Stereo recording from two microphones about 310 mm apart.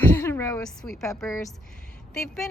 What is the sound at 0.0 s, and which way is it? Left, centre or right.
A woman's voice, centre.